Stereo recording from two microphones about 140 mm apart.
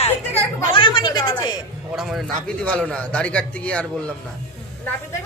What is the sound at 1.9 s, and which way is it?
A man's voice, centre (ahead or behind).